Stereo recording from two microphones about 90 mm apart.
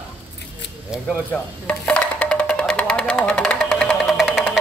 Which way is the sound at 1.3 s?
15° left (ahead or behind).